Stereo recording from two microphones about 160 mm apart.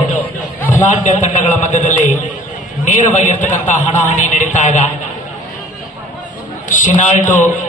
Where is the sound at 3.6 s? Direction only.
50° left (ahead or behind).